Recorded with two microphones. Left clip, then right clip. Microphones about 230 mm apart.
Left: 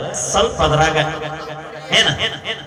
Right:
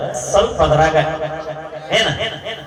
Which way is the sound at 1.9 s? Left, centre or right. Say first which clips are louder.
Left 2 dB; centre.